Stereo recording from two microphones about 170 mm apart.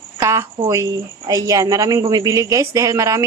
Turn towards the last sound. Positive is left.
turn(degrees=-15)  # may be behind; listen again after turning